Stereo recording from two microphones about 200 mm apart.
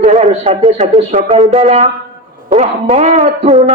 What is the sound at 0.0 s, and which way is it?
A man's voice, 30° right (ahead or behind).